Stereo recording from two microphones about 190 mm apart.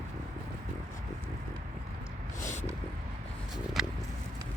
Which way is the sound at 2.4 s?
40° left (ahead or behind).